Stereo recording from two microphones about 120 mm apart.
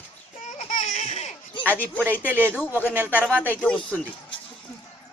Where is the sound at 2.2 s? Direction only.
15° right (ahead or behind).